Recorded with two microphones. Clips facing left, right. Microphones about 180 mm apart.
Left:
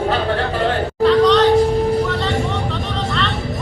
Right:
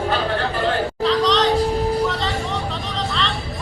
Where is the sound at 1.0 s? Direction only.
Centre (ahead or behind).